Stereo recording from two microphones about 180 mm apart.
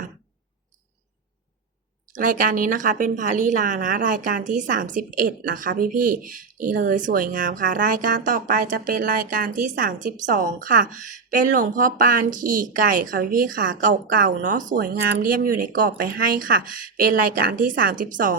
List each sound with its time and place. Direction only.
2.1 s speech: 45° right (ahead or behind)